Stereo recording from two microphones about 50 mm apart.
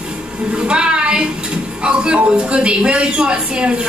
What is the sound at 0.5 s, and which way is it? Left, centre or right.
Speech, centre.